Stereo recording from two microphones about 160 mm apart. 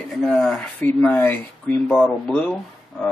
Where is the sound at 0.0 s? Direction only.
Centre (ahead or behind).